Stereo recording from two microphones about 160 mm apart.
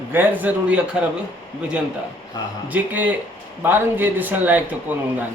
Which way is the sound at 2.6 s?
10° right (ahead or behind).